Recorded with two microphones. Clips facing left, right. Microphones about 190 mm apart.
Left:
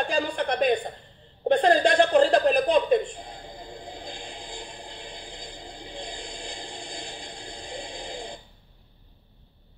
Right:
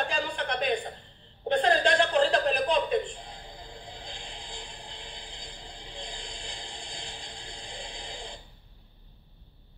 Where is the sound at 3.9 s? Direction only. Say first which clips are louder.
Left 5 dB; 50° left (ahead or behind).